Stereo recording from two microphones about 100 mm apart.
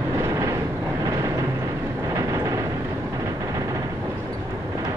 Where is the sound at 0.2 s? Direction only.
35° right (ahead or behind).